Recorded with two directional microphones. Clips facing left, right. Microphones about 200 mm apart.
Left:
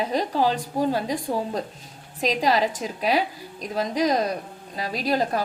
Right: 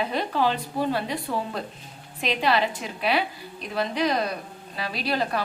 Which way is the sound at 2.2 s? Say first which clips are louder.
Left 2 dB; 40° left (ahead or behind).